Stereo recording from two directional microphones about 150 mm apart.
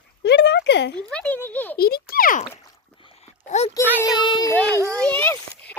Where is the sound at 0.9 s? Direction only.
5° left (ahead or behind).